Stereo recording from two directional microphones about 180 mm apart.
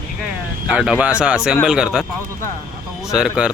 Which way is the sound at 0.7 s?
5° right (ahead or behind).